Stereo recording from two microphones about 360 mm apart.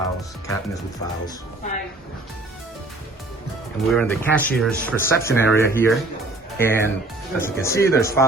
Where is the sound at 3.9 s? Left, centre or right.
Centre.